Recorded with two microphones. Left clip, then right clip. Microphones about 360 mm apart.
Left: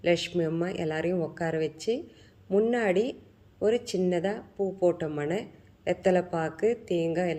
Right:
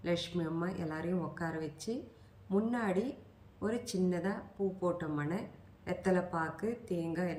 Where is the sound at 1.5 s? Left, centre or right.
Centre.